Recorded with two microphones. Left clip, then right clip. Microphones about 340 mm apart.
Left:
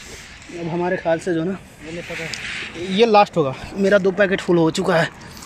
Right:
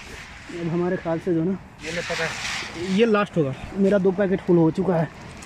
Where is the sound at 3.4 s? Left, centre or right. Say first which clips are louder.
Left 4 dB; left.